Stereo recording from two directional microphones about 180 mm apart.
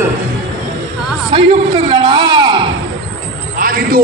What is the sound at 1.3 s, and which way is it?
A man's voice, 30° right (ahead or behind).